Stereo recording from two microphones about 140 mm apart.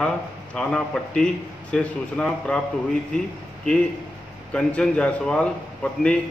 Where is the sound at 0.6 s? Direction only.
5° left (ahead or behind).